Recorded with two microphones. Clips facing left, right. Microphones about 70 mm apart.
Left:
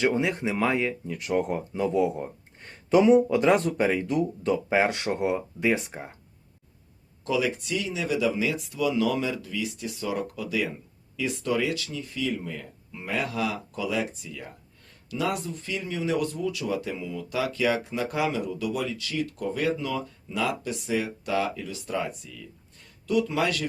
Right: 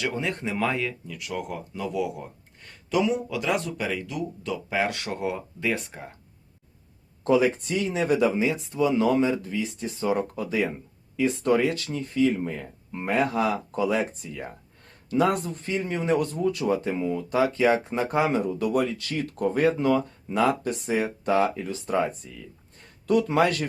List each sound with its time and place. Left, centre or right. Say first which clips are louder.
0.2 s speech: left 2 dB; centre
0.9 s speech: left 5 dB; left
7.3 s speech: right 5 dB; right
8.4 s speech: right 3 dB; right
23.0 s speech: right 4 dB; right